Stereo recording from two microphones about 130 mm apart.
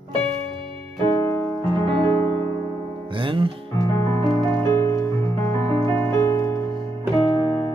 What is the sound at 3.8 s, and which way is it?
Music, 25° left (ahead or behind).